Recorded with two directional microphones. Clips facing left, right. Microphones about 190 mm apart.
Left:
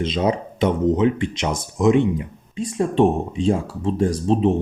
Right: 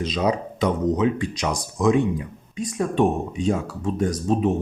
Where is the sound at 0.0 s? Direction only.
25° left (ahead or behind).